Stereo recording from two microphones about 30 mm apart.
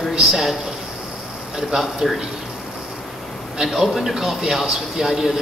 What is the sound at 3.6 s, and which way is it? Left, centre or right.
Speech, centre.